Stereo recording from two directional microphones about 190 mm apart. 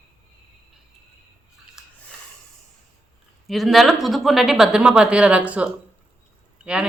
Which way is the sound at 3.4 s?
Centre (ahead or behind).